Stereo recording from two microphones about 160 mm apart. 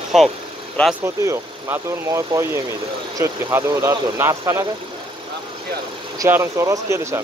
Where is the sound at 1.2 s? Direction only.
20° right (ahead or behind).